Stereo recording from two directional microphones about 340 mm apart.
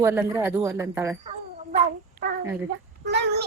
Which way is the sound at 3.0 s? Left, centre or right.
Right.